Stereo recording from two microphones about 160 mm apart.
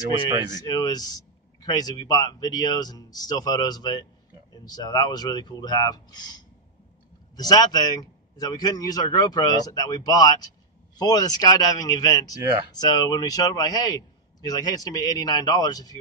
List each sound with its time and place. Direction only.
0.3 s speech: 30° right (ahead or behind)
0.6 s speech: 25° left (ahead or behind)